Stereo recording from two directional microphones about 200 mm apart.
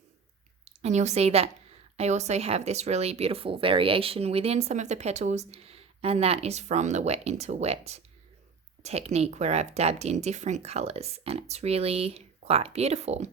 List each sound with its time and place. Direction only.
0.6 s a woman's voice: 35° right (ahead or behind)